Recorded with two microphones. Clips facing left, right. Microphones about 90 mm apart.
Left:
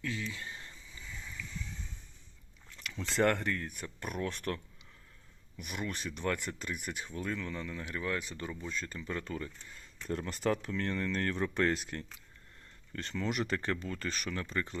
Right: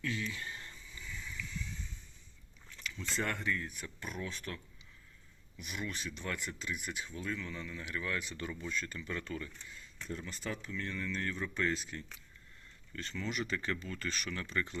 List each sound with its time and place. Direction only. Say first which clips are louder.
0.0 s a sound: even; 25° left (ahead or behind)
2.8 s speech: left 8 dB; 80° left; by 9.7 s 35° left (ahead or behind)
10.1 s speech: left 9 dB; 65° left (ahead or behind)
13.2 s speech: left 4 dB; 55° left (ahead or behind); by 14.8 s 40° left (ahead or behind)